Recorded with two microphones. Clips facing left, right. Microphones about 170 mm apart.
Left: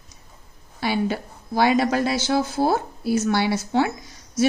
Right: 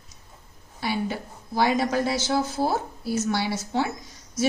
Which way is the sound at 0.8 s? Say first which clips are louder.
Left 4 dB; 80° left.